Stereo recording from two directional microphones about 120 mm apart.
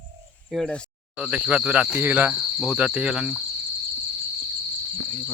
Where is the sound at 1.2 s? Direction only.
10° right (ahead or behind).